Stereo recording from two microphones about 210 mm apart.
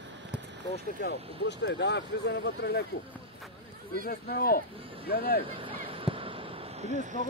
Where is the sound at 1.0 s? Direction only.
55° left (ahead or behind).